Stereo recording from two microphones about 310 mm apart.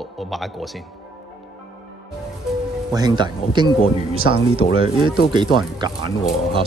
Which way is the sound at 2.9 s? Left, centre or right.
Centre.